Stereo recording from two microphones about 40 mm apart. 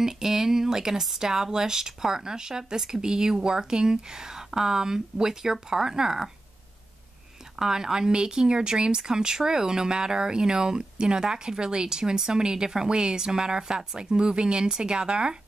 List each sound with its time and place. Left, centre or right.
0.0 s speech: centre
7.5 s speech: centre